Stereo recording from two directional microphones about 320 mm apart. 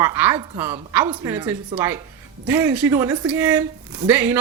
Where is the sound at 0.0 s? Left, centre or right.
Centre.